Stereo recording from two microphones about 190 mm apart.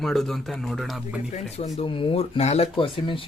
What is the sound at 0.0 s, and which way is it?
Speech, centre (ahead or behind).